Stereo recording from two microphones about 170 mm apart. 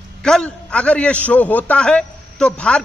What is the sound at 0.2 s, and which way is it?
A man's voice, 5° left (ahead or behind).